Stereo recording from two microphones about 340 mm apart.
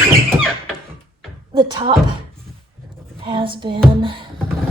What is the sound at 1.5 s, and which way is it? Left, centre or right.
Female singing, centre.